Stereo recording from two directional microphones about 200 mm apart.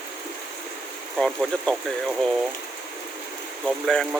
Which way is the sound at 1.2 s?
Centre (ahead or behind).